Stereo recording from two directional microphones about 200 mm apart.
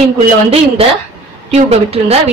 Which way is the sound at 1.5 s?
30° right (ahead or behind).